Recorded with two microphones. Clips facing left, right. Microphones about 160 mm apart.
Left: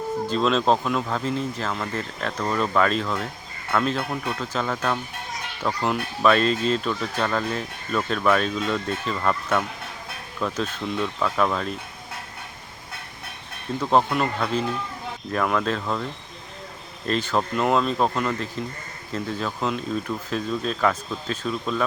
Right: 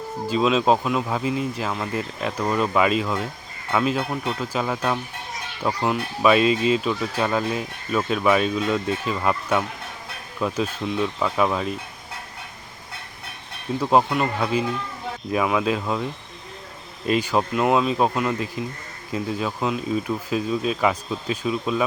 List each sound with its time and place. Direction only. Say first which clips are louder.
0.3 s speech: right 3 dB; 5° right (ahead or behind)
13.7 s speech: right 1 dB; 10° right (ahead or behind)
17.1 s speech: right 3 dB; 10° right (ahead or behind)